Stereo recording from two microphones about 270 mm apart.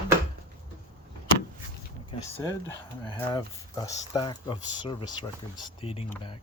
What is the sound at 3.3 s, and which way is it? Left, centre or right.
Speech, centre.